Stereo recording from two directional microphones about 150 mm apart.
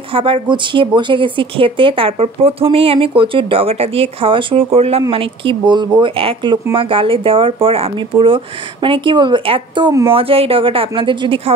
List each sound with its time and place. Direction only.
0.1 s speech: 35° right (ahead or behind)